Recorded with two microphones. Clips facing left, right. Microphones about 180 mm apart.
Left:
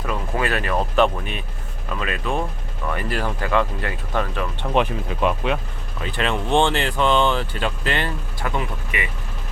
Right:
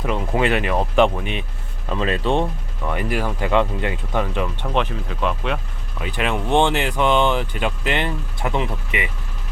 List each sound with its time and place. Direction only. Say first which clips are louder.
0.0 s speech: right 4 dB; 20° right (ahead or behind)
2.9 s speech: right 2 dB; 15° right (ahead or behind)
4.6 s speech: left 2 dB; 10° left (ahead or behind)
6.0 s speech: right 1 dB; 10° right (ahead or behind)